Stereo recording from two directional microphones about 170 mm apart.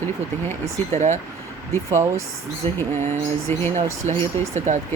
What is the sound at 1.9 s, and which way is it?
Speech, 15° right (ahead or behind).